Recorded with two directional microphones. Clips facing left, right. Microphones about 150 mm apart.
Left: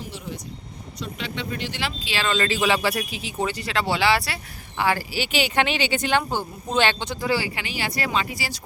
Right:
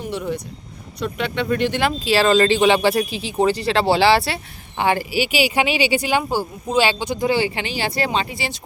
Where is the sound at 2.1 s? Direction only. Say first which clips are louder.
Right 8 dB; 35° right (ahead or behind).